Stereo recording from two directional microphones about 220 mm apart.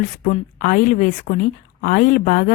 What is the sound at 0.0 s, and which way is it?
A woman's voice, 35° left (ahead or behind).